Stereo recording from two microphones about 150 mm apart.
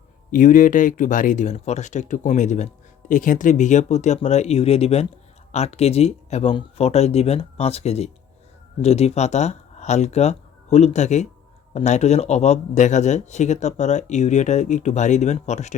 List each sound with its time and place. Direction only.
0.3 s speech: 60° left (ahead or behind)